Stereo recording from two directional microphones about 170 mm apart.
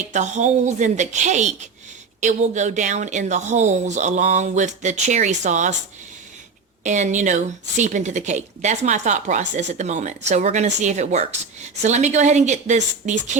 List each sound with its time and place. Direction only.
0.1 s speech: 45° right (ahead or behind)
6.8 s speech: 45° right (ahead or behind)